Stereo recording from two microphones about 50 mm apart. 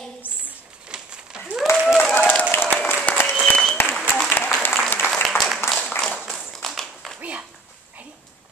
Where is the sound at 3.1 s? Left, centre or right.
Left.